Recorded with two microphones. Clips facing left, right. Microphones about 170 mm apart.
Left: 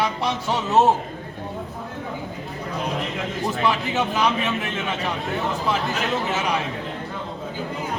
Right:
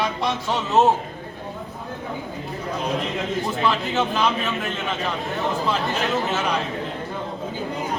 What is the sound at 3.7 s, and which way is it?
Speech, 10° left (ahead or behind).